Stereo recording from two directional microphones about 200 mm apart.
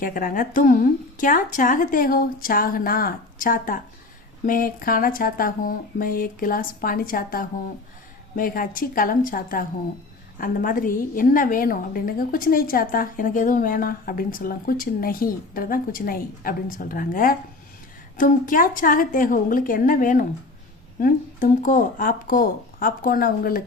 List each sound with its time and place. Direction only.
0.0 s a woman's voice: 45° left (ahead or behind)